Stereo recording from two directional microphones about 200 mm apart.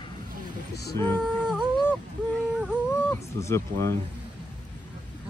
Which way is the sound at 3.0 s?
10° left (ahead or behind).